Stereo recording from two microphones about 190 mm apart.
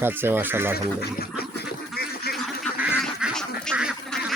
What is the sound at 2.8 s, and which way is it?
Goose, 5° right (ahead or behind).